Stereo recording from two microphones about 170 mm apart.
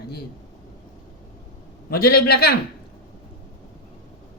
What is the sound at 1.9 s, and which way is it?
Speech, 65° left (ahead or behind).